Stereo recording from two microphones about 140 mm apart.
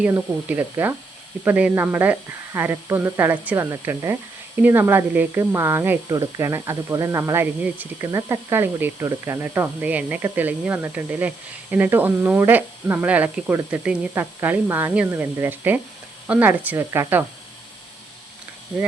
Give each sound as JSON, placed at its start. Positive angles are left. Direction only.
{"t": 0.0, "sound": "speech", "side_deg": -10}
{"t": 6.1, "sound": "speech", "side_deg": -25}